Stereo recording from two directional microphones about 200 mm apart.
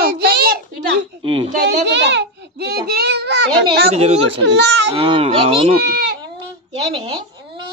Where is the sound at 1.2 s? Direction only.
25° right (ahead or behind).